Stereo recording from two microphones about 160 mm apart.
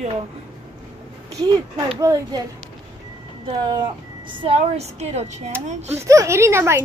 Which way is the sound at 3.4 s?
30° right (ahead or behind).